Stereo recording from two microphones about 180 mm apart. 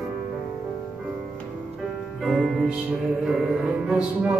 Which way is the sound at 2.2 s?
Centre (ahead or behind).